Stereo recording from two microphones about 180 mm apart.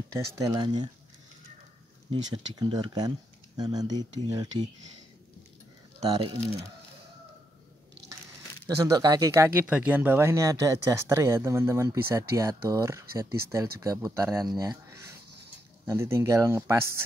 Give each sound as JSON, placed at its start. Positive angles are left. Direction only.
{"t": 0.1, "sound": "speech", "side_deg": -20}
{"t": 2.3, "sound": "speech", "side_deg": -25}
{"t": 5.9, "sound": "speech", "side_deg": -25}
{"t": 8.6, "sound": "speech", "side_deg": -20}